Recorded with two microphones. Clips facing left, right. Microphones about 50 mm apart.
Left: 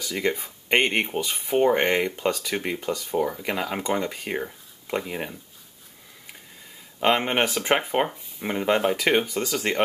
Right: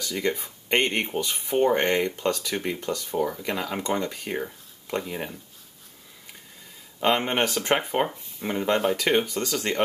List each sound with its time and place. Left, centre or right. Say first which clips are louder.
0.0 s speech: left 1 dB; centre
7.1 s speech: left 1 dB; centre